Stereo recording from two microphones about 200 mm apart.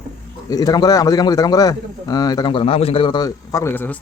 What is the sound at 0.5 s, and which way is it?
A man's voice, 20° left (ahead or behind).